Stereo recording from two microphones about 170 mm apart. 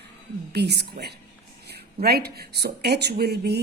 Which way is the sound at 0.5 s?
75° right (ahead or behind).